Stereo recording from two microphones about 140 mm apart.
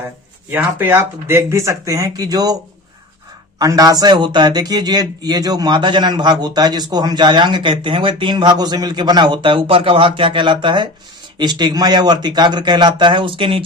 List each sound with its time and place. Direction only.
0.5 s speech: 15° right (ahead or behind)
3.6 s a man's voice: 25° right (ahead or behind)